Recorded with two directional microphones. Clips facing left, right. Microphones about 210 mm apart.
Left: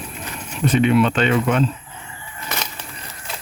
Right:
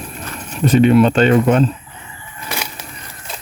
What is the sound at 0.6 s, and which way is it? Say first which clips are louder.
Speech: right 5 dB; 40° right (ahead or behind).